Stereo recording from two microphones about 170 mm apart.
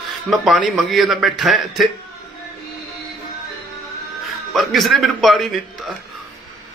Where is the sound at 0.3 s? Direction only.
Centre (ahead or behind).